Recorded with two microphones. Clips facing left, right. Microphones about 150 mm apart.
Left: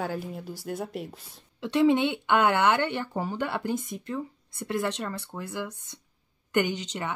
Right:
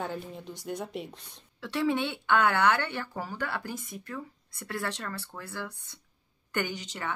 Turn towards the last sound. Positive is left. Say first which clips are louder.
# left 5 dB
turn(degrees=20)  # may be behind; listen again after turning